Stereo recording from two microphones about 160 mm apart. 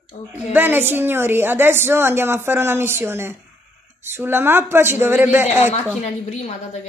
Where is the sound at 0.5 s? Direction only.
15° right (ahead or behind).